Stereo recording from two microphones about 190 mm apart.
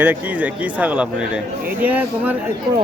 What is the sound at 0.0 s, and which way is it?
Speech, 10° right (ahead or behind).